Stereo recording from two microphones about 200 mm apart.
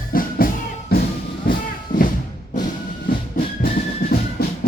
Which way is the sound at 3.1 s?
45° left (ahead or behind).